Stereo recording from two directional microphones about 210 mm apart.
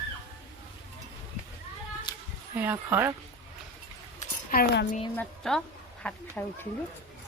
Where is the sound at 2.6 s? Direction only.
10° right (ahead or behind).